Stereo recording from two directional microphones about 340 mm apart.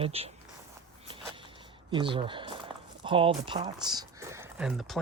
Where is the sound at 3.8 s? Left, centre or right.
Centre.